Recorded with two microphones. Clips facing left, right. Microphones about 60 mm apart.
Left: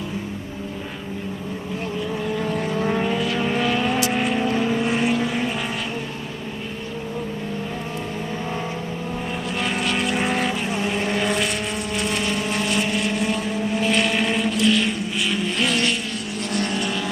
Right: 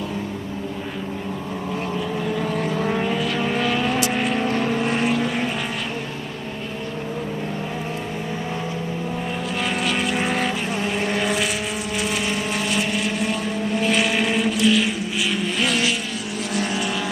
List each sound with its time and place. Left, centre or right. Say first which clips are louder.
2.0 s vehicle: left 1 dB; centre
9.6 s vehicle: even; centre